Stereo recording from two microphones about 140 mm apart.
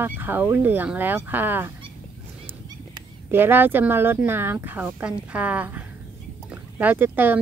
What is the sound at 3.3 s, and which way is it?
A woman's voice, 15° right (ahead or behind).